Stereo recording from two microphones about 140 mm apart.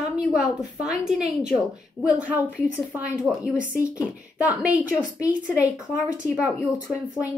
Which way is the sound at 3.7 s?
20° left (ahead or behind).